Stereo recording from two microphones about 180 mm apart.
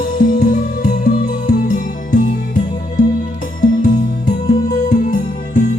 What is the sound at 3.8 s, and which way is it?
Music, 50° left (ahead or behind).